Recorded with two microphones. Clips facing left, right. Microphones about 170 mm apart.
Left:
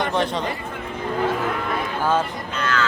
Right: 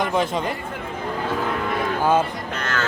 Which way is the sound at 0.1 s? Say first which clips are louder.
Right 1 dB; 5° right (ahead or behind).